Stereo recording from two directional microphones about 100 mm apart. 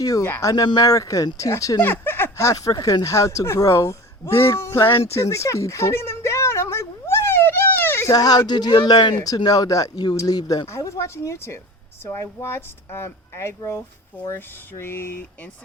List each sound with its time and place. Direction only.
0.0 s speech: 35° left (ahead or behind)
0.5 s speech: 45° left (ahead or behind)
1.8 s speech: 20° left (ahead or behind)
5.0 s a sound: 30° left (ahead or behind)
8.1 s speech: 40° left (ahead or behind)
9.1 s speech: 40° left (ahead or behind)